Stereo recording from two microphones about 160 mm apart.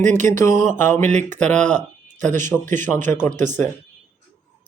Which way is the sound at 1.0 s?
50° right (ahead or behind).